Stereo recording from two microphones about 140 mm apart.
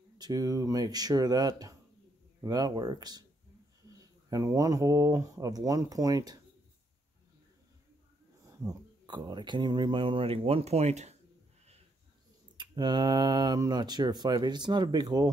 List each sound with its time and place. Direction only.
0.2 s speech: 30° right (ahead or behind)
8.5 s speech: 30° right (ahead or behind); by 11.1 s 50° right (ahead or behind)
12.5 s speech: 30° right (ahead or behind)